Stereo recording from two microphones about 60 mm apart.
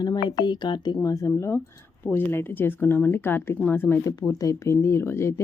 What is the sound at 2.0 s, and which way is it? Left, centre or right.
Speech, left.